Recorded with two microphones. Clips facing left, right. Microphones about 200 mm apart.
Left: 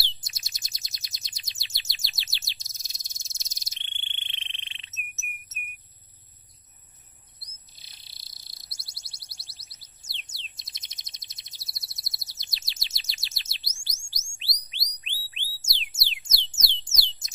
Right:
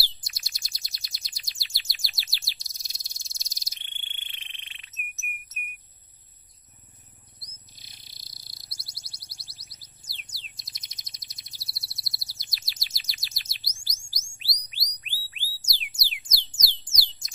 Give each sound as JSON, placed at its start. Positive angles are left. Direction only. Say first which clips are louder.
{"t": 0.2, "sound": "bird", "louder": "even", "side_deg": 20}
{"t": 7.7, "sound": "bird", "louder": "right 3 dB", "side_deg": 30}
{"t": 8.5, "sound": "synthesizer", "louder": "right 2 dB", "side_deg": 25}
{"t": 15.6, "sound": "music", "louder": "left 1 dB", "side_deg": 25}